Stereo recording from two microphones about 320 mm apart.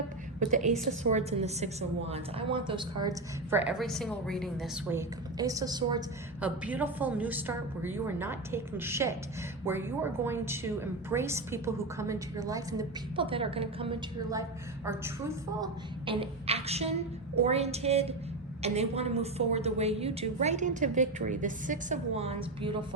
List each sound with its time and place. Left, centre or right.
0.3 s a woman's voice: right
15.6 s a woman's voice: centre